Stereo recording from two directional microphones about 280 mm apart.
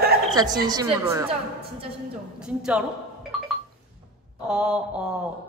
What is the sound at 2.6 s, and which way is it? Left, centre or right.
Mantra, centre.